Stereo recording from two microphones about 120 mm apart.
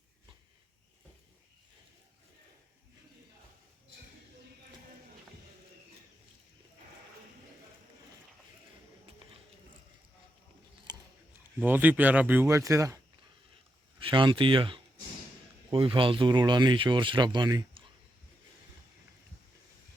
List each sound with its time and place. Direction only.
10.9 s a sound: 35° right (ahead or behind)
11.6 s speech: 15° right (ahead or behind)
12.5 s speech: 25° right (ahead or behind)
14.0 s speech: 45° right (ahead or behind)